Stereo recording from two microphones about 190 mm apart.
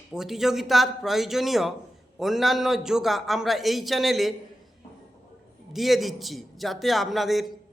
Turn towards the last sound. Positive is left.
turn(degrees=0)  # may be behind; listen again after turning